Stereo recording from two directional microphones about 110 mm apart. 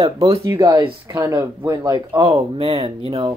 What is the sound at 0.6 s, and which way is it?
Speech, 20° right (ahead or behind).